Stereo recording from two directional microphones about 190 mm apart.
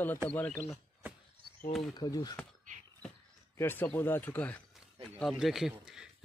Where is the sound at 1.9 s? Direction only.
20° left (ahead or behind).